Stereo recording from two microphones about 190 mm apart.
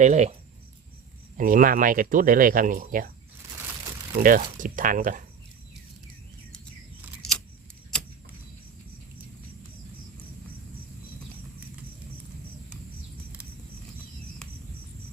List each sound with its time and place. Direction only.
0.0 s speech: 35° right (ahead or behind)
1.4 s speech: 45° right (ahead or behind)
4.2 s speech: 45° right (ahead or behind)
7.2 s scissors: 5° left (ahead or behind)